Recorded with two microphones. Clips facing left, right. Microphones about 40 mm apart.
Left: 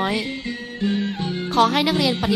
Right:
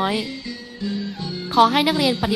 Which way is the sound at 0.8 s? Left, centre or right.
Left.